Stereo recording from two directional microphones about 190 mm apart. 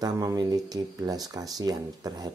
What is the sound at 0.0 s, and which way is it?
Speech, 20° right (ahead or behind).